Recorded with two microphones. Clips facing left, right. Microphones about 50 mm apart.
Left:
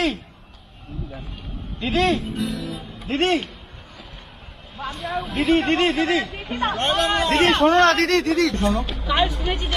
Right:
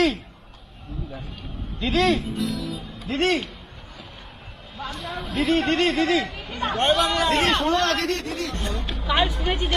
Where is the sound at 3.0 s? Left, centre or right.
Left.